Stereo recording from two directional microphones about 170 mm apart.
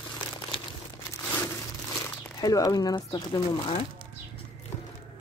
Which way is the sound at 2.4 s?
20° left (ahead or behind).